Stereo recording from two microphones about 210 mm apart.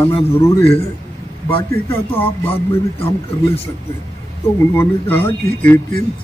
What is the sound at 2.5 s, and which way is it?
Speech, 30° left (ahead or behind).